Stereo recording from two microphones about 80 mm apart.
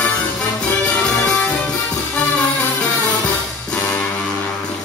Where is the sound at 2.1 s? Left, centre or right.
Centre.